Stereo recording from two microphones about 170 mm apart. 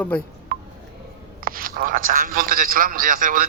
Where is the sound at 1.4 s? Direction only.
55° right (ahead or behind).